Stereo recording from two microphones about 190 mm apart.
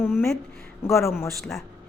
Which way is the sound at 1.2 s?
Centre (ahead or behind).